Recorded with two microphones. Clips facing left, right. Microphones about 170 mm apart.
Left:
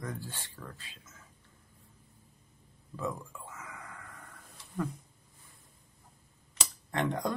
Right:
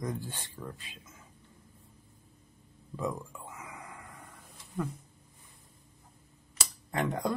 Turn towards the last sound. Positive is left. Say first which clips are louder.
# even
turn(degrees=-10)  # may be behind; listen again after turning